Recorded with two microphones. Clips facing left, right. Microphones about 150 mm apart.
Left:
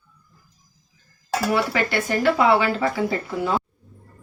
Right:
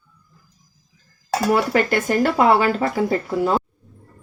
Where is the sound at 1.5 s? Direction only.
45° right (ahead or behind).